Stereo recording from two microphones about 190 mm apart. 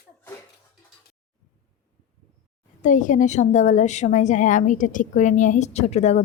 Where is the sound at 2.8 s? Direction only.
40° left (ahead or behind).